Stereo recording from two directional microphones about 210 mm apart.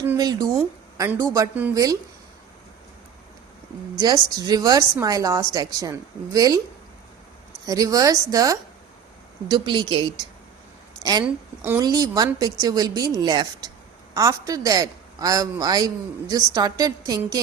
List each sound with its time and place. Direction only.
0.0 s a man's voice: 15° right (ahead or behind)
3.9 s a man's voice: 20° right (ahead or behind)
7.7 s a man's voice: 15° right (ahead or behind)